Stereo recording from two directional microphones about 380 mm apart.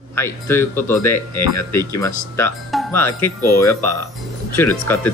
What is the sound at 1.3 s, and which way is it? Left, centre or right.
Speech, left.